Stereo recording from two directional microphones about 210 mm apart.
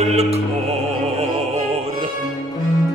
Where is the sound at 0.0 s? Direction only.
30° right (ahead or behind).